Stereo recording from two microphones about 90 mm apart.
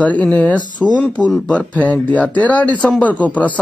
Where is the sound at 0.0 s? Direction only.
15° left (ahead or behind).